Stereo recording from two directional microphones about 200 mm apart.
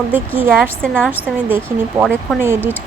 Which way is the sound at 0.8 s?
5° left (ahead or behind).